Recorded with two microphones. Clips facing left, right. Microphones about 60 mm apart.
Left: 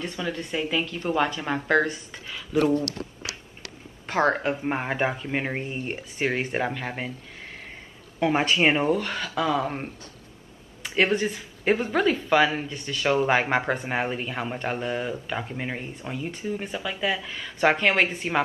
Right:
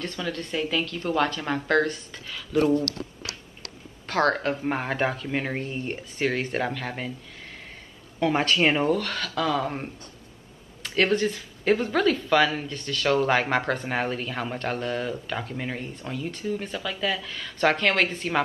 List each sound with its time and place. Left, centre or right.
0.0 s speech: centre
2.9 s a sound: left
4.1 s speech: centre
8.2 s speech: centre